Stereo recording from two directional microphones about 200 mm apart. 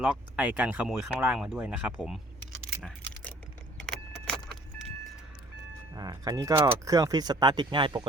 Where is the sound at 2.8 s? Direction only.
5° left (ahead or behind).